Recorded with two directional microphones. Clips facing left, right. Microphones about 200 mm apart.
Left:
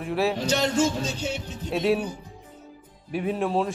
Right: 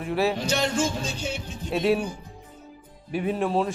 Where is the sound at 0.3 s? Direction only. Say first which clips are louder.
Left 2 dB; 25° left (ahead or behind).